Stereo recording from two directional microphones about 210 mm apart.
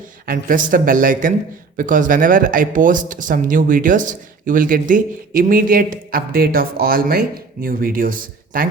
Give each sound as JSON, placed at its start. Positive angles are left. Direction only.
{"t": 0.3, "sound": "speech", "side_deg": -40}